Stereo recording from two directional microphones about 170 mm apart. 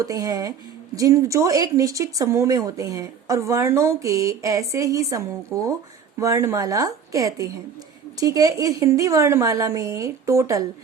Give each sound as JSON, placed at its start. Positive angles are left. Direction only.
{"t": 0.0, "sound": "speech", "side_deg": -20}